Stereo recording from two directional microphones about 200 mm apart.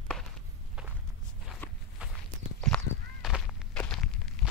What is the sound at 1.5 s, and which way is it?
Walk, centre (ahead or behind).